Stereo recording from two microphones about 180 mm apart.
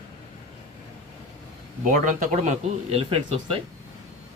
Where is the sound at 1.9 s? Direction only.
45° right (ahead or behind).